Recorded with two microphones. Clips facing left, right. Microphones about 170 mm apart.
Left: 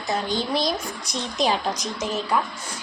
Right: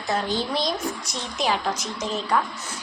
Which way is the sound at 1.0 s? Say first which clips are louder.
Left 3 dB; 15° left (ahead or behind).